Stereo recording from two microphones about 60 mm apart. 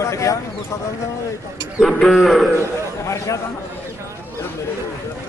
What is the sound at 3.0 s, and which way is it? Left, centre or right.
Speech, left.